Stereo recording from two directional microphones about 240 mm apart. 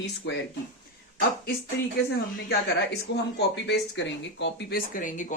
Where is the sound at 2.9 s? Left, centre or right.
Left.